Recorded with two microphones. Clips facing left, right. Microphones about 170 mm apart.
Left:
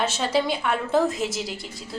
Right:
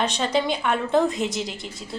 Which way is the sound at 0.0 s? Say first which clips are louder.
Even; 5° left (ahead or behind).